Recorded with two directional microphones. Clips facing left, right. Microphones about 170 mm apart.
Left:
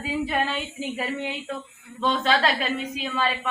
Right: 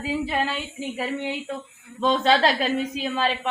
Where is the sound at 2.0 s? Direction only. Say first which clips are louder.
Right 3 dB; 20° right (ahead or behind).